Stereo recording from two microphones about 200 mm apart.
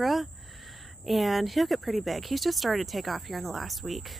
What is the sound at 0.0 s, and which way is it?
Speech, centre (ahead or behind).